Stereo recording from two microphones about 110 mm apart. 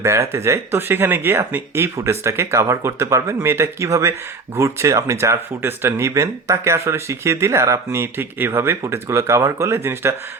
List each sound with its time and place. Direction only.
0.0 s speech: 25° right (ahead or behind)